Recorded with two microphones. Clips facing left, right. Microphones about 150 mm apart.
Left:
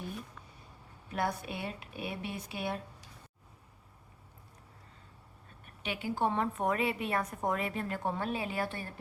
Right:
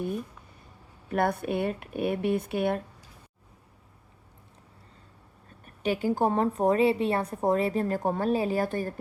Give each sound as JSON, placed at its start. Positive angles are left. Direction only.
{"t": 1.1, "sound": "speech", "side_deg": -55}
{"t": 5.6, "sound": "a woman's voice", "side_deg": -40}